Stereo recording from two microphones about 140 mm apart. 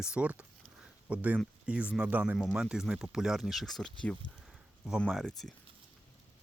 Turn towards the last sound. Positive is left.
turn(degrees=5)  # may be behind; listen again after turning